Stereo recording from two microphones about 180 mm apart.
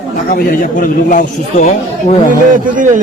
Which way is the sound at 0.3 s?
50° left (ahead or behind).